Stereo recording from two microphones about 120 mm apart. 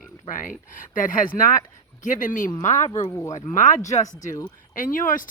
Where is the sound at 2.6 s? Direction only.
80° left.